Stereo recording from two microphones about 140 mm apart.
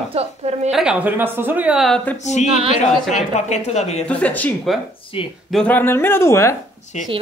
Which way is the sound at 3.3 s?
55° left (ahead or behind).